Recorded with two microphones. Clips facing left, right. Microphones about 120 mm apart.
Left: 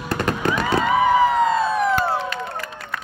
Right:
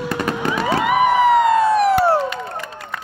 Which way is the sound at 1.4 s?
80° right.